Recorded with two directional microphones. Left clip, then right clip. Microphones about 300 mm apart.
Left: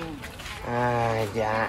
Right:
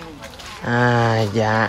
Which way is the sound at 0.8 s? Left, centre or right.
Right.